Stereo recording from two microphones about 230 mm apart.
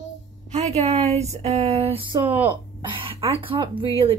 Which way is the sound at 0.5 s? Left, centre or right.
Right.